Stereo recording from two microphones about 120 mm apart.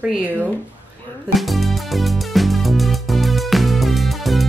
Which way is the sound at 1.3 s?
Centre (ahead or behind).